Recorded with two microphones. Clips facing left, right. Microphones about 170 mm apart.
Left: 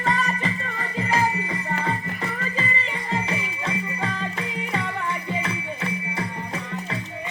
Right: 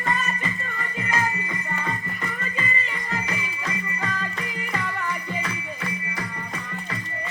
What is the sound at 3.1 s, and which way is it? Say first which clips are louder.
Music: left 4 dB; 30° left (ahead or behind).